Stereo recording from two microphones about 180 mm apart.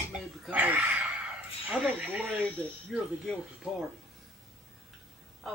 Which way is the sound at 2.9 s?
Centre (ahead or behind).